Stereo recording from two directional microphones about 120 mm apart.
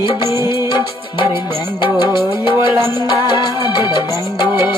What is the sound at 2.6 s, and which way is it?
Music, 25° right (ahead or behind).